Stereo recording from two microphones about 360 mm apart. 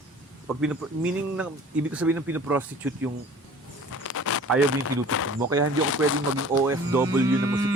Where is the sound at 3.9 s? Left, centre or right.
Left.